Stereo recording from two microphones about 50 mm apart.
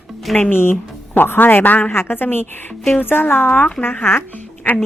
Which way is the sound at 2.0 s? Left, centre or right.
Left.